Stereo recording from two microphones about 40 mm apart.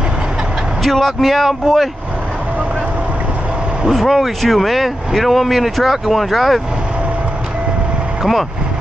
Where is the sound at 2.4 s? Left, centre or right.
Right.